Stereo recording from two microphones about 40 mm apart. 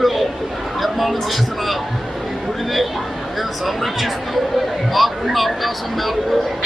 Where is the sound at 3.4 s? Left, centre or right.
Centre.